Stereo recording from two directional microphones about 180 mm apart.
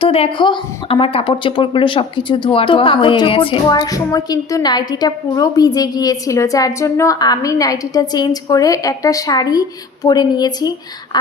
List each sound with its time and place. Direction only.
0.0 s a woman's voice: 30° left (ahead or behind)